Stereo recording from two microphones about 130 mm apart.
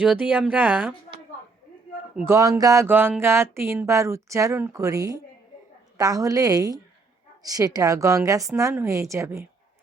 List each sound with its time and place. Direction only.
0.0 s speech: 10° right (ahead or behind)
2.2 s speech: 25° right (ahead or behind)